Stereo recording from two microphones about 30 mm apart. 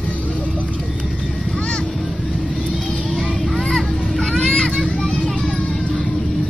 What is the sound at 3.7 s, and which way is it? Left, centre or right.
Children playing, left.